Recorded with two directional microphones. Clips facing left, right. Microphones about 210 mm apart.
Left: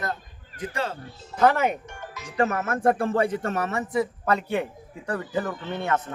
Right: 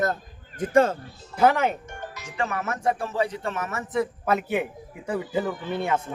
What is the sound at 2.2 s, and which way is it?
Speech, 40° left (ahead or behind).